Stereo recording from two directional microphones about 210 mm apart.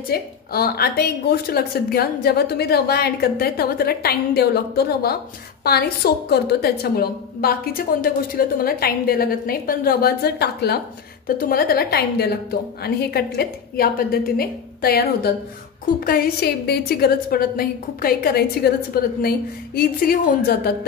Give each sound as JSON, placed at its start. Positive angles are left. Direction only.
{"t": 0.1, "sound": "a woman's voice", "side_deg": 45}